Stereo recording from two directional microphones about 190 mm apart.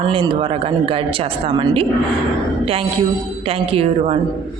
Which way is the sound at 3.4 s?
30° right (ahead or behind).